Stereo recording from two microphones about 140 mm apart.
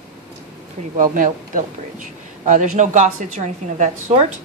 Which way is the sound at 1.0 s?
70° right (ahead or behind).